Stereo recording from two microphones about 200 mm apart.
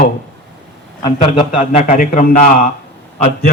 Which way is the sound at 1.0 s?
20° left (ahead or behind).